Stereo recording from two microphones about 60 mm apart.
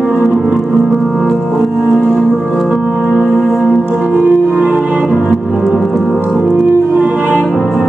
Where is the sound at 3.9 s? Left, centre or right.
Centre.